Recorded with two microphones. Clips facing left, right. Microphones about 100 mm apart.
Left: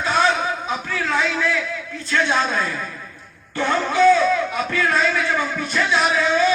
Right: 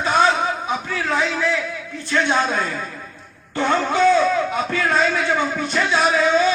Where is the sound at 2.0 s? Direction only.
20° right (ahead or behind).